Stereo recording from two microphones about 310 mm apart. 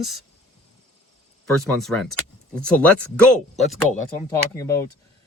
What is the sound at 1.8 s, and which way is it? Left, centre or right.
Speech, centre.